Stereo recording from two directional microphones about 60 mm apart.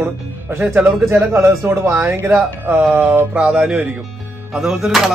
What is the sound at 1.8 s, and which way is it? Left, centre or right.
Speech, right.